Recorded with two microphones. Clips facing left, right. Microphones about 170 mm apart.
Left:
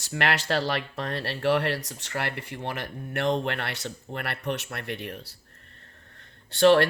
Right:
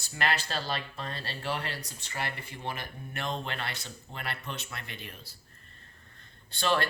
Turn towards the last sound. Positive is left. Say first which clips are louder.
# left 11 dB
turn(degrees=70)  # may be behind; listen again after turning